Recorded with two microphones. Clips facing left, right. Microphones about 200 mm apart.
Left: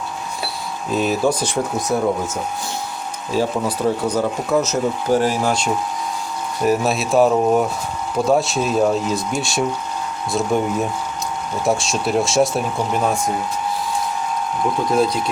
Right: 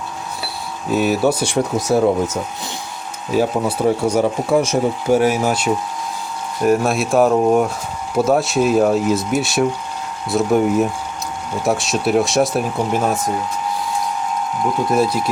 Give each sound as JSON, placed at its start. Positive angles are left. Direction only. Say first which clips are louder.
{"t": 0.9, "sound": "speech", "louder": "right 2 dB", "side_deg": -5}
{"t": 1.5, "sound": "speech", "louder": "right 3 dB", "side_deg": -70}
{"t": 3.3, "sound": "speech", "louder": "right 3 dB", "side_deg": -10}
{"t": 14.9, "sound": "speech", "louder": "even", "side_deg": -5}